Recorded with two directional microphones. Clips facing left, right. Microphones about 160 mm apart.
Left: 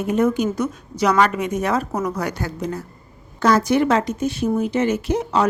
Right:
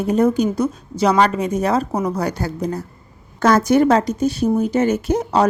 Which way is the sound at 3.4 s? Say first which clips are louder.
Right 3 dB; 45° right (ahead or behind).